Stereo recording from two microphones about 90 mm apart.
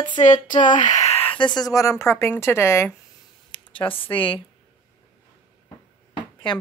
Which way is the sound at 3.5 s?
65° left (ahead or behind).